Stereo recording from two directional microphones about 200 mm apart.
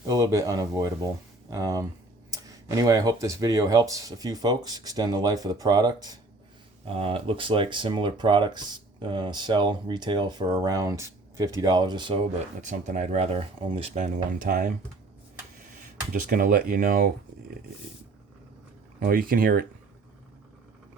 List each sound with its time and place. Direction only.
0.1 s speech: 15° right (ahead or behind)
12.5 s speech: 35° right (ahead or behind)
16.3 s speech: 45° right (ahead or behind)
18.9 s speech: 45° right (ahead or behind)